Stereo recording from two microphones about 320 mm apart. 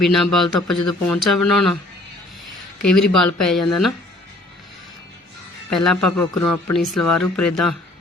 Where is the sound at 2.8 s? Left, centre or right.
Left.